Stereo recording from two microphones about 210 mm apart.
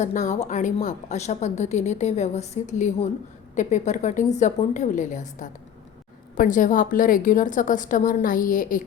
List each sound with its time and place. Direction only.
0.0 s a woman's voice: 35° left (ahead or behind)